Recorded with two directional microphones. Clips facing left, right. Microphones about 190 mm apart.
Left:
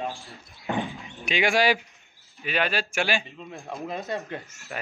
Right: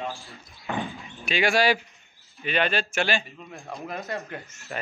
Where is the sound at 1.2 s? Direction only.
15° left (ahead or behind).